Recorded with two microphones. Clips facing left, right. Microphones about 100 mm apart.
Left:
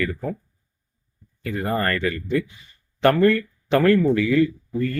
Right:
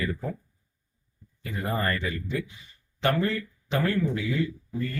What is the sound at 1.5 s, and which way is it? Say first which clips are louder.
Speech: left 5 dB; 60° left (ahead or behind).